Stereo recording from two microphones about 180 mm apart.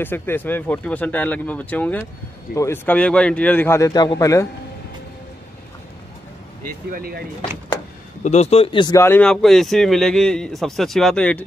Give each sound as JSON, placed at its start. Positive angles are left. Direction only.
{"t": 0.0, "sound": "speech", "side_deg": 10}
{"t": 6.9, "sound": "speech", "side_deg": -55}
{"t": 8.2, "sound": "speech", "side_deg": 40}